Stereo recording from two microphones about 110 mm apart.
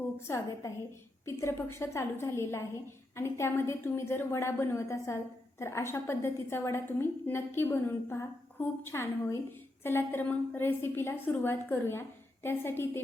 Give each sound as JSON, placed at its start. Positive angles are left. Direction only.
{"t": 0.3, "sound": "a woman's voice", "side_deg": 25}